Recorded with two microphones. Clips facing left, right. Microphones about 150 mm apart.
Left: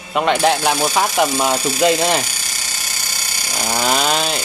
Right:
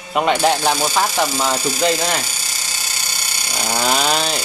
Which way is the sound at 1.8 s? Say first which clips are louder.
Left 4 dB; 20° left (ahead or behind).